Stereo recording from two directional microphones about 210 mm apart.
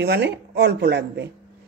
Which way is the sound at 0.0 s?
50° right (ahead or behind).